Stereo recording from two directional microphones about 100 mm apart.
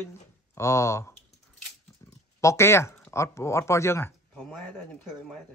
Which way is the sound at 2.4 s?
30° left (ahead or behind).